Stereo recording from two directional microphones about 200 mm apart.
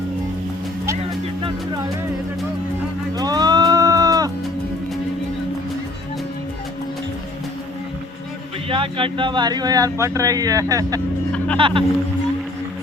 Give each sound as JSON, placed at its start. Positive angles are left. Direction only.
{"t": 3.2, "sound": "music", "side_deg": -20}
{"t": 8.7, "sound": "speech", "side_deg": -25}